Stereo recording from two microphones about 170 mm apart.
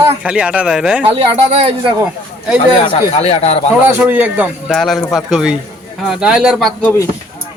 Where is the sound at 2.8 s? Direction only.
35° left (ahead or behind).